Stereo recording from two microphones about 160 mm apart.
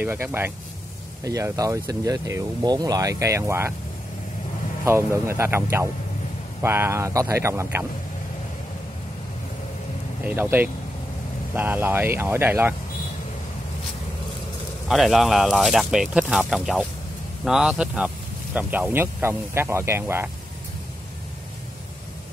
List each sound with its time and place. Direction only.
0.0 s speech: 15° right (ahead or behind)
4.8 s speech: 15° right (ahead or behind)
10.2 s speech: 10° right (ahead or behind)
14.9 s speech: centre (ahead or behind)